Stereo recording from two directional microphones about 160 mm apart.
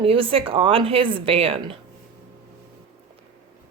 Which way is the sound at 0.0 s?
35° right (ahead or behind).